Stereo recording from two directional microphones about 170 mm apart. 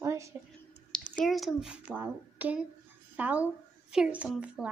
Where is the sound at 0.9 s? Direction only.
5° left (ahead or behind).